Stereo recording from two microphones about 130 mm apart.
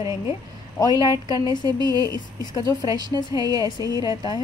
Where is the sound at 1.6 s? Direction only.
30° right (ahead or behind).